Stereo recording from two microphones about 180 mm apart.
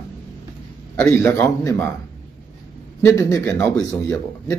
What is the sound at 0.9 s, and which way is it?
Speech, 15° left (ahead or behind).